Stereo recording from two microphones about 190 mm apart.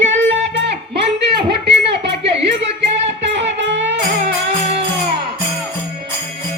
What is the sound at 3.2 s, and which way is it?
Music, 70° right (ahead or behind).